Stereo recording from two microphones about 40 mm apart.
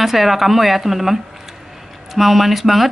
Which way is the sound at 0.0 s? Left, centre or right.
Centre.